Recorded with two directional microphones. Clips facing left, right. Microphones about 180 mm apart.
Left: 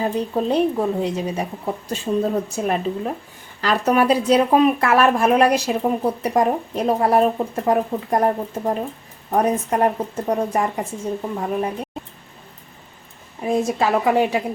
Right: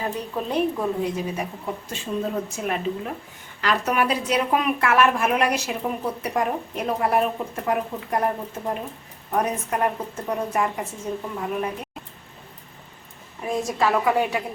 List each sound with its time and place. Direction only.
0.0 s a woman's voice: 30° left (ahead or behind)
2.1 s a woman's voice: 45° left (ahead or behind)
13.7 s a woman's voice: 25° left (ahead or behind)